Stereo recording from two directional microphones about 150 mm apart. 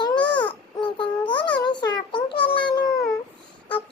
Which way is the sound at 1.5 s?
30° left (ahead or behind).